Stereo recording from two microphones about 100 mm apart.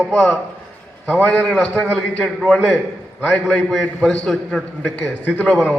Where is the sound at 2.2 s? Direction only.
5° left (ahead or behind).